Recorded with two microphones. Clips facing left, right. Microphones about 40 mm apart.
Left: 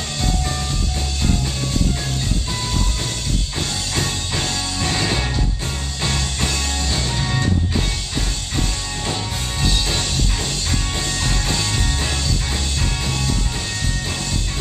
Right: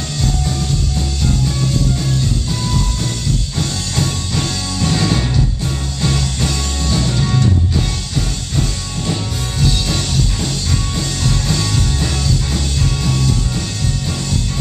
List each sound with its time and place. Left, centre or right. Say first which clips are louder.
3.5 s music: right 3 dB; centre
6.0 s music: right 4 dB; centre
9.6 s music: right 3 dB; centre